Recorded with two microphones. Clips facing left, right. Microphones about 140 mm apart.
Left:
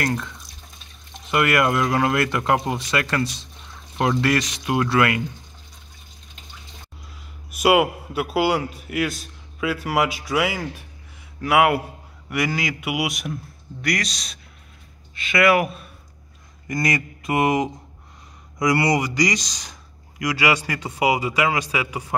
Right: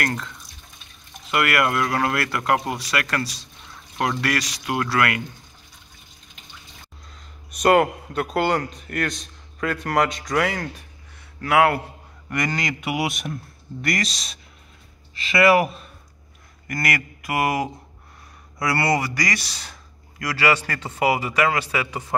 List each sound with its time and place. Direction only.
1.3 s speech: 20° left (ahead or behind)
7.5 s a man's voice: 5° left (ahead or behind)
16.6 s speech: 20° left (ahead or behind)